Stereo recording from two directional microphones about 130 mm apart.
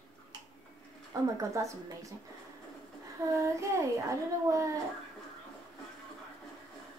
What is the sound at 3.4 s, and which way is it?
Speech, 20° right (ahead or behind).